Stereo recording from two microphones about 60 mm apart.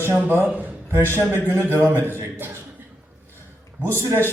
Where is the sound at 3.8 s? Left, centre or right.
Right.